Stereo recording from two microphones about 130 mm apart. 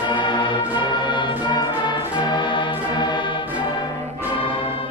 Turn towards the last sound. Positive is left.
turn(degrees=45)  # may be behind; listen again after turning